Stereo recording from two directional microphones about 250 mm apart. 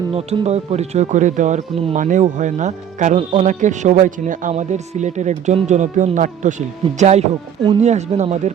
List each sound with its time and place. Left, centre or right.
0.1 s speech: right